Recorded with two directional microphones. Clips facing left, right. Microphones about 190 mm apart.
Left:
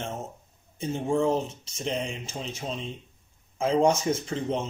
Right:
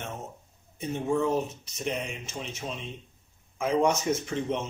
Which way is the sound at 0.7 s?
30° left (ahead or behind).